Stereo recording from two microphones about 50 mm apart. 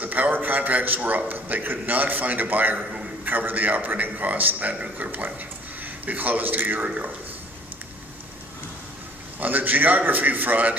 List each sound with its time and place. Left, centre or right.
0.0 s a sound: right
1.3 s a man's voice: right
9.4 s a man's voice: right